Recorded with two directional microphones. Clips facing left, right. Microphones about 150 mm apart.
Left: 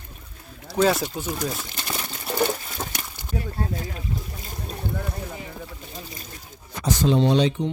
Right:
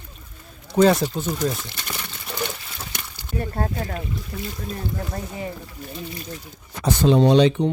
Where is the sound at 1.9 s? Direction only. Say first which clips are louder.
Left 5 dB; 40° left (ahead or behind).